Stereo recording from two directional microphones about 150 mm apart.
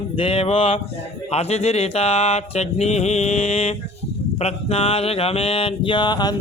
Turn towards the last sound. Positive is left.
turn(degrees=30)  # may be behind; listen again after turning